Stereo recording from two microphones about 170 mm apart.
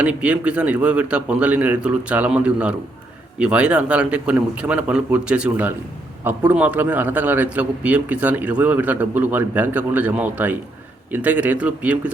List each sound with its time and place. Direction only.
0.0 s a man's voice: 5° right (ahead or behind)